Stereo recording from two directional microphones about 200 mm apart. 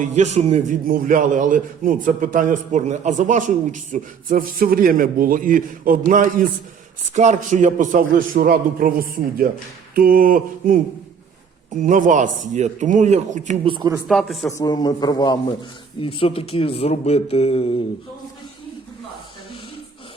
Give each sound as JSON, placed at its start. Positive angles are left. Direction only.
{"t": 0.0, "sound": "a man's voice", "side_deg": -35}
{"t": 11.8, "sound": "a man's voice", "side_deg": -40}
{"t": 13.7, "sound": "speech", "side_deg": -20}
{"t": 14.1, "sound": "a man's voice", "side_deg": 0}
{"t": 14.5, "sound": "speech", "side_deg": 20}